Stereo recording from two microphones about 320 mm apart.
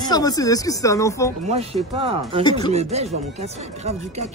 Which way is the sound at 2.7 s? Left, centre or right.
Centre.